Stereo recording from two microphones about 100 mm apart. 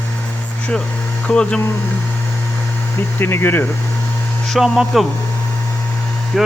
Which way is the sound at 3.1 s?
20° left (ahead or behind).